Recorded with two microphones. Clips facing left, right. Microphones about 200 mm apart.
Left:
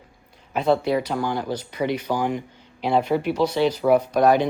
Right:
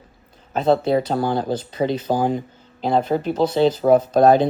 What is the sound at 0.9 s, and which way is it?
Speech, 35° right (ahead or behind).